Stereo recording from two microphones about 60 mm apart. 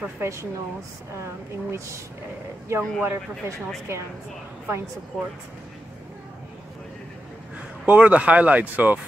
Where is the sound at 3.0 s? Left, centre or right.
Right.